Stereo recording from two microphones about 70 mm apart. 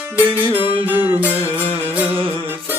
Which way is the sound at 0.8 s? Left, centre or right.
Right.